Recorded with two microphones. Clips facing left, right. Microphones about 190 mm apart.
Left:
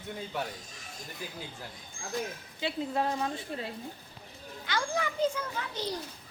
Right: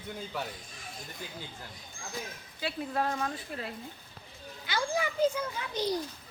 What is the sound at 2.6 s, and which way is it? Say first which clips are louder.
A woman's voice: left 1 dB; 20° left (ahead or behind).